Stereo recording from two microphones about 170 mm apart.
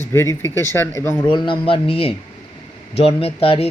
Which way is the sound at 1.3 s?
30° left (ahead or behind).